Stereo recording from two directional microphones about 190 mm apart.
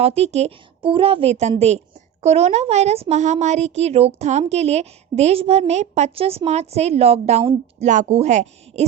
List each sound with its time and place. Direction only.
0.0 s speech: 30° right (ahead or behind)